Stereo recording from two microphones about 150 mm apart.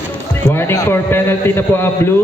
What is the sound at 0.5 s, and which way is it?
A man's voice, 15° left (ahead or behind).